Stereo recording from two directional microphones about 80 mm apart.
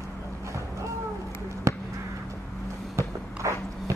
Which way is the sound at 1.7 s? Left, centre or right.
Right.